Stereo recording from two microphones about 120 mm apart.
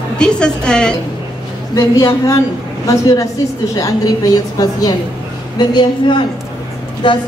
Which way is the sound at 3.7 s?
30° left (ahead or behind).